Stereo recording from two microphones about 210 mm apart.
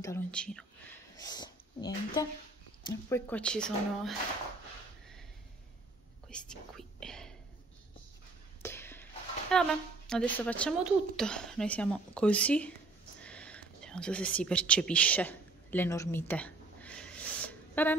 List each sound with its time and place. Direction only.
0.0 s speech: 10° left (ahead or behind)
1.2 s speech: 20° left (ahead or behind); by 4.1 s 5° left (ahead or behind)
6.3 s speech: 5° left (ahead or behind)
8.6 s a sound: 10° left (ahead or behind)
9.5 s speech: 5° left (ahead or behind)
13.2 s whispering: 5° left (ahead or behind)